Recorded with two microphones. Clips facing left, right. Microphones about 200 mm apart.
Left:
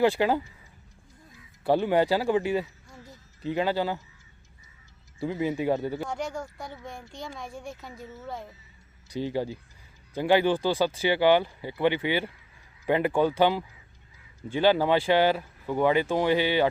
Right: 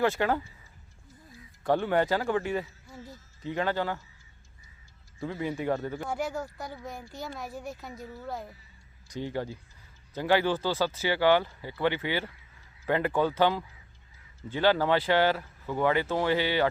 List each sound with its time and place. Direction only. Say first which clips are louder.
0.2 s speech: left 3 dB; 15° left (ahead or behind)
1.7 s speech: left 3 dB; 15° left (ahead or behind)
5.2 s speech: left 4 dB; 20° left (ahead or behind)
6.1 s speech: right 1 dB; 5° right (ahead or behind)
9.2 s speech: left 4 dB; 15° left (ahead or behind)